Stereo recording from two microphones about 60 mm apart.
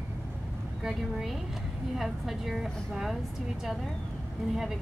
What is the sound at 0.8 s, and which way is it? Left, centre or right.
A woman's voice, centre.